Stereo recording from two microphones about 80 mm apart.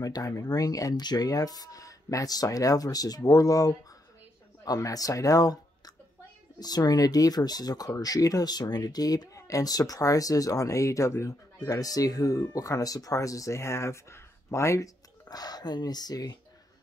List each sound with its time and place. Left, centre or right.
0.0 s speech: left
15.2 s speech: left